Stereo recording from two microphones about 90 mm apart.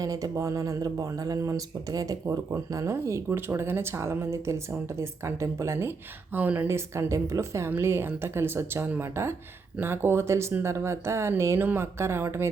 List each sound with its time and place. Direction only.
0.0 s speech: 40° right (ahead or behind)
6.3 s speech: 20° right (ahead or behind)
6.7 s speech: 30° right (ahead or behind)